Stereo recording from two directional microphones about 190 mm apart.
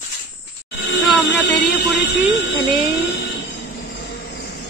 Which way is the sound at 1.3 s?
60° left (ahead or behind).